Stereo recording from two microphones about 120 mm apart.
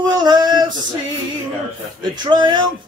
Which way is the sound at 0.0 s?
35° right (ahead or behind).